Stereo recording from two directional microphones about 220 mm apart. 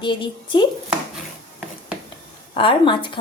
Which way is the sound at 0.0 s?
20° left (ahead or behind).